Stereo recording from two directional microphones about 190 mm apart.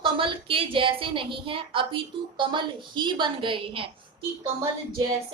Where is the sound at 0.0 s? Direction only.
25° right (ahead or behind).